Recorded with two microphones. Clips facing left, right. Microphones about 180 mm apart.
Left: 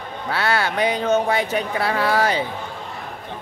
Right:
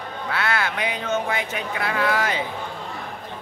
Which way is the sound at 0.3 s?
30° left (ahead or behind).